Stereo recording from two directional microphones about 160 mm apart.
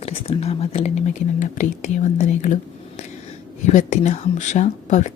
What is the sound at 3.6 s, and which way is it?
Speech, 45° left (ahead or behind).